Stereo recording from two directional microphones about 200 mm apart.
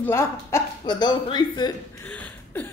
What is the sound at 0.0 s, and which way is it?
Speech, 15° left (ahead or behind).